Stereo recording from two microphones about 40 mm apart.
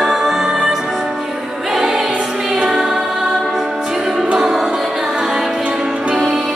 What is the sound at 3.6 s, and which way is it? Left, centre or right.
Music, centre.